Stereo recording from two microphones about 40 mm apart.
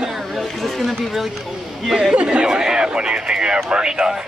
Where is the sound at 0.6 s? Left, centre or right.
Centre.